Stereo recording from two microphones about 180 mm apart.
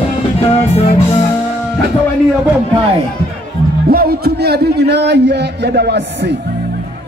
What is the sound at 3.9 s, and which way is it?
A man's voice, 55° right (ahead or behind).